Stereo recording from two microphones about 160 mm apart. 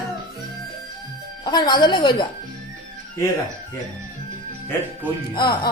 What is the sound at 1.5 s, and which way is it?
Speech, 25° left (ahead or behind).